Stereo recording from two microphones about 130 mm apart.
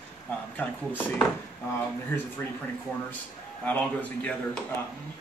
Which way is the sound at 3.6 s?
10° left (ahead or behind).